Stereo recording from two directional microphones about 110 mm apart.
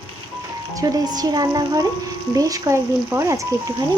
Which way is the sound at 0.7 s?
35° right (ahead or behind).